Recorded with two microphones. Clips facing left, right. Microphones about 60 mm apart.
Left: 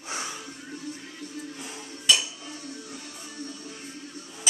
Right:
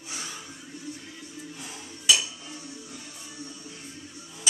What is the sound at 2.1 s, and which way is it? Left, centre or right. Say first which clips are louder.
Cutlery: even; centre.